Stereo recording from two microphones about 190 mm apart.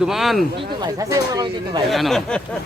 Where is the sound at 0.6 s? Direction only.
20° right (ahead or behind).